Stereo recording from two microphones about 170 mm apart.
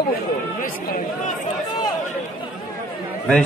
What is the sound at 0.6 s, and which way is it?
Speech, 55° left (ahead or behind).